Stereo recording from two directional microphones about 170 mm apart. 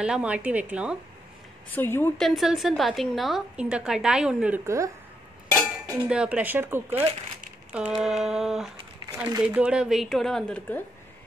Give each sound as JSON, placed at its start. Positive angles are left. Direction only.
{"t": 0.0, "sound": "speech", "side_deg": -5}
{"t": 1.7, "sound": "a woman's voice", "side_deg": 10}
{"t": 2.1, "sound": "a woman's voice", "side_deg": 0}
{"t": 4.6, "sound": "speech", "side_deg": -20}
{"t": 5.9, "sound": "a woman's voice", "side_deg": -5}
{"t": 9.0, "sound": "a sound", "side_deg": -25}
{"t": 9.4, "sound": "a woman's voice", "side_deg": -5}